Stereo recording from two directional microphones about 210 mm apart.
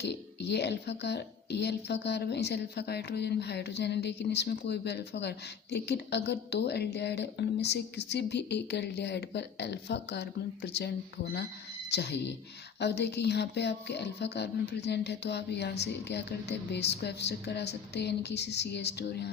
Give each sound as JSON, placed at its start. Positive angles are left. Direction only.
{"t": 0.0, "sound": "a woman's voice", "side_deg": 55}